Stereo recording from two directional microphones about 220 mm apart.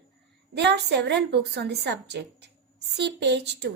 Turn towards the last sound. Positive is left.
turn(degrees=-50)  # may be behind; listen again after turning